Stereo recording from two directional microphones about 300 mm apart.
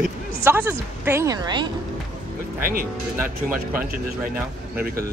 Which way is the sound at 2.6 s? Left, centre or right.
Right.